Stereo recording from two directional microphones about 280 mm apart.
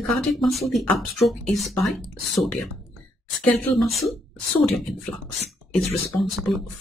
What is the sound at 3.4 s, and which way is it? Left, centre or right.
Speech, centre.